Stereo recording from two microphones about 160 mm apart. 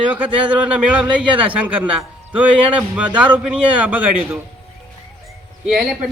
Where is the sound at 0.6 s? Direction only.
5° right (ahead or behind).